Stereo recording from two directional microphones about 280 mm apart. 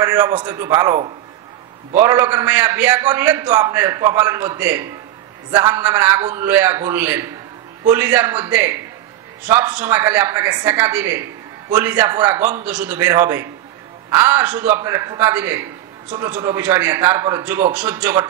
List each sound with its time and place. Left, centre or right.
0.0 s speech: centre